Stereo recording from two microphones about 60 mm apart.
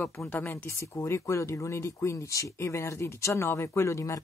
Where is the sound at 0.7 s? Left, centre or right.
Left.